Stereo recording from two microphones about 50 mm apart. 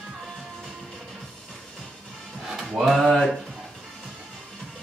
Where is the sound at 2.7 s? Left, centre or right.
Centre.